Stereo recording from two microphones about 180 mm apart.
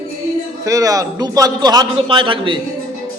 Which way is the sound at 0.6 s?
20° right (ahead or behind).